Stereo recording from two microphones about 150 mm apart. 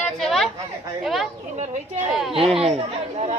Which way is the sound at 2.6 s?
45° right (ahead or behind).